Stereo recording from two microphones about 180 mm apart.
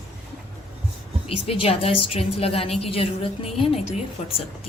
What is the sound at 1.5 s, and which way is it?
A woman's voice, 30° left (ahead or behind).